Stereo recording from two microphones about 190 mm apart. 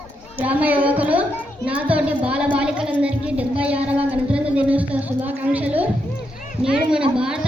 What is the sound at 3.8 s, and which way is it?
Speech, 30° right (ahead or behind).